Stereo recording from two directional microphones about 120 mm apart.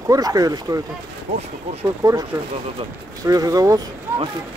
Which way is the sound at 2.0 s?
30° right (ahead or behind).